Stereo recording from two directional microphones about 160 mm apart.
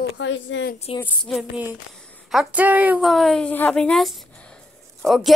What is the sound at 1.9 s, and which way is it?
A woman's voice, 5° left (ahead or behind).